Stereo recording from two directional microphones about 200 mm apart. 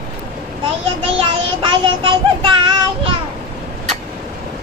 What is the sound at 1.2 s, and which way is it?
Child singing, 25° right (ahead or behind).